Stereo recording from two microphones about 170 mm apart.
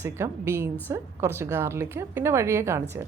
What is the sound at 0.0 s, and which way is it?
Speech, 15° right (ahead or behind).